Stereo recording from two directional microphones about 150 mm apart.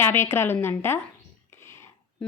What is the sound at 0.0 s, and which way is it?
A woman's voice, 15° left (ahead or behind).